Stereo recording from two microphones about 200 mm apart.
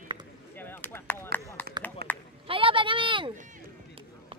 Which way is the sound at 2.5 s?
25° right (ahead or behind).